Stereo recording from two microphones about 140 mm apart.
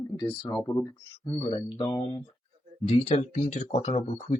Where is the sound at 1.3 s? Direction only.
35° left (ahead or behind).